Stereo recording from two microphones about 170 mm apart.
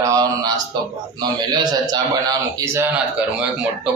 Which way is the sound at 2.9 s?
5° right (ahead or behind).